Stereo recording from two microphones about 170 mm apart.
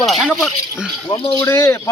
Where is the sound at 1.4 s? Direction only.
15° left (ahead or behind).